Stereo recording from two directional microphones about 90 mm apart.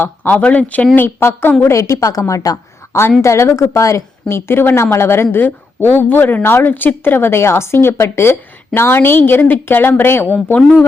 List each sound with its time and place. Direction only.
0.0 s a woman's voice: 20° left (ahead or behind)
1.6 s a woman's voice: 35° left (ahead or behind)